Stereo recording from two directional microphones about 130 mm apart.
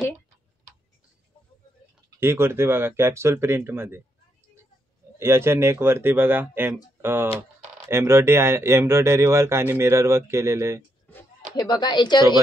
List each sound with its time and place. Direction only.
2.1 s speech: 20° right (ahead or behind)
5.2 s speech: 20° right (ahead or behind)
11.5 s speech: 30° left (ahead or behind)